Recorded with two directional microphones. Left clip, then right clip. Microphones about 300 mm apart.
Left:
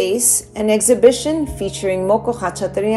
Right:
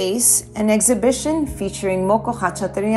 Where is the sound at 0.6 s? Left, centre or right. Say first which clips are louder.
Left 6 dB; centre.